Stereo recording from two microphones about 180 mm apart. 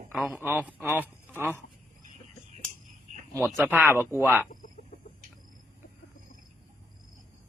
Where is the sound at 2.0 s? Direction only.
45° right (ahead or behind).